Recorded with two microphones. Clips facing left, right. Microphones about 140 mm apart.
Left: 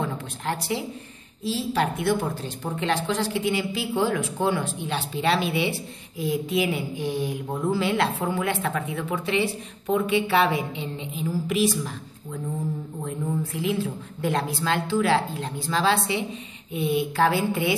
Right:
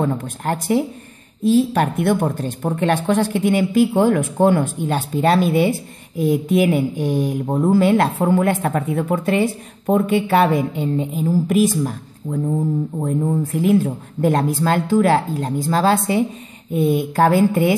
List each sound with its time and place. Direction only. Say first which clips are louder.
0.0 s a woman's voice: right 8 dB; 45° right (ahead or behind)